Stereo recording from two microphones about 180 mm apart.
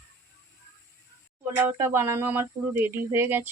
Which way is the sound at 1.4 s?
10° right (ahead or behind).